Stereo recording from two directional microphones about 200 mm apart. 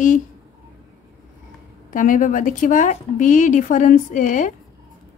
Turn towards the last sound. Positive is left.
turn(degrees=40)  # may be behind; listen again after turning